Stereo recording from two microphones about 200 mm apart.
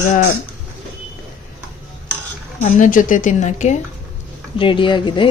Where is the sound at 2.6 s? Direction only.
40° left (ahead or behind).